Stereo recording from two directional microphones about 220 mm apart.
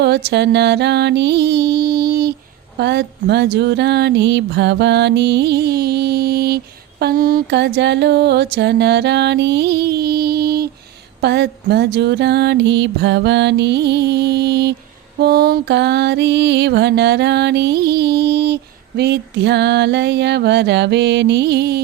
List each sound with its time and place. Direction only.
0.0 s music: 50° right (ahead or behind)